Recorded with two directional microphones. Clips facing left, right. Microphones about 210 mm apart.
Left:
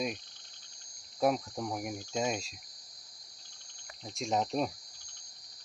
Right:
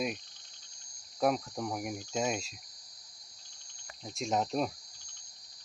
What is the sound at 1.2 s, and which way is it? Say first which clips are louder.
Speech: even; centre (ahead or behind).